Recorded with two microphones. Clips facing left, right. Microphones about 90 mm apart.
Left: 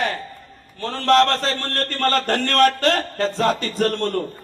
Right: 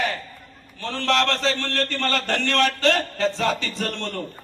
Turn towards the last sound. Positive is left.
turn(degrees=45)  # may be behind; listen again after turning